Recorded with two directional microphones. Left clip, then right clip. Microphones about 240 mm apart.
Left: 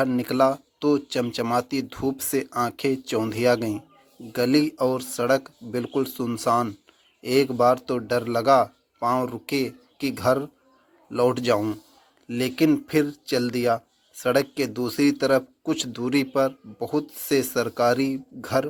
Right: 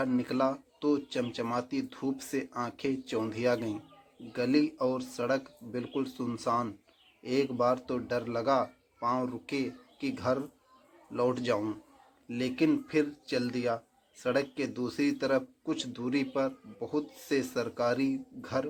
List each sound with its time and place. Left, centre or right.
0.0 s speech: left